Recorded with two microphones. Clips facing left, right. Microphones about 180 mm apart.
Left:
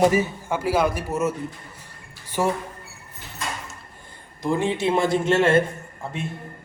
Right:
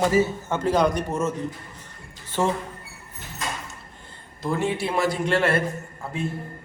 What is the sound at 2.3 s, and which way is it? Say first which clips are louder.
Speech: even; 10° left (ahead or behind).